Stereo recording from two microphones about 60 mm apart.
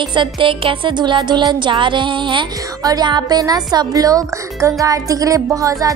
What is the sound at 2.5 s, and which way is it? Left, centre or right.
Speech, right.